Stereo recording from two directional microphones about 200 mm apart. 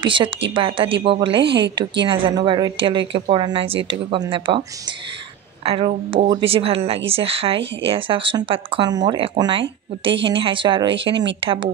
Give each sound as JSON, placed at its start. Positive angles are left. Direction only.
{"t": 0.0, "sound": "speech", "side_deg": -25}
{"t": 1.4, "sound": "a woman's voice", "side_deg": -60}
{"t": 2.0, "sound": "speech", "side_deg": -25}